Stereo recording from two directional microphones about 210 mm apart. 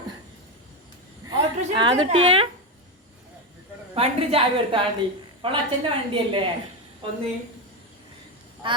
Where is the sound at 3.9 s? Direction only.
30° right (ahead or behind).